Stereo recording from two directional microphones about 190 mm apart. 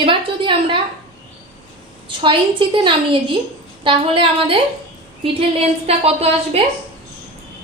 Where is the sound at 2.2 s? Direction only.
25° right (ahead or behind).